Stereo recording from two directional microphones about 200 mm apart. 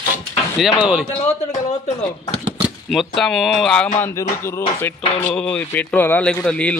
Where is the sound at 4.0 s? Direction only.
15° left (ahead or behind).